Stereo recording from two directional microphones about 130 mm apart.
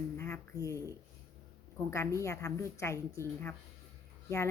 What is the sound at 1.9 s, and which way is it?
Speech, 20° left (ahead or behind).